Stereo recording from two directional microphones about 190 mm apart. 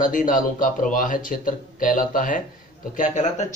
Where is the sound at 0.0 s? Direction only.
45° left (ahead or behind).